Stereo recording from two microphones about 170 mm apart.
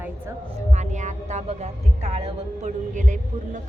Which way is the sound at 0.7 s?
45° right (ahead or behind).